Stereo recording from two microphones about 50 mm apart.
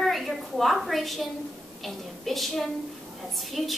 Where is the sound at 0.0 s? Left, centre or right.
Centre.